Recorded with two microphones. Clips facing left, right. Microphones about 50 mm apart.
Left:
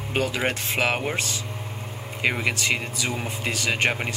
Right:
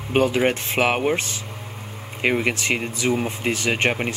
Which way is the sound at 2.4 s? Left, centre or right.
Right.